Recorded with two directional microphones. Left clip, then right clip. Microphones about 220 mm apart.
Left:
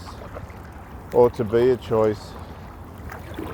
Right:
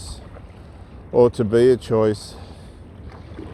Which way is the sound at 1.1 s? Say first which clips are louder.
Right 2 dB; 50° right (ahead or behind).